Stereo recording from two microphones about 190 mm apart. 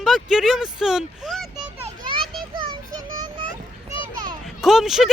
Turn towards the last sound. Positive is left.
turn(degrees=0)  # may be behind; listen again after turning